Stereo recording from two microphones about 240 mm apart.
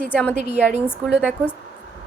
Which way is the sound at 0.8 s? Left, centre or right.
Centre.